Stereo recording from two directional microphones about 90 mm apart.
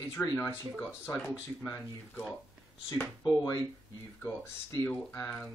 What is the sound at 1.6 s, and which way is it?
Speech, 25° left (ahead or behind).